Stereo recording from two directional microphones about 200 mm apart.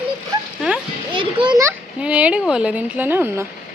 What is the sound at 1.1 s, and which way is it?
Speech, 25° right (ahead or behind).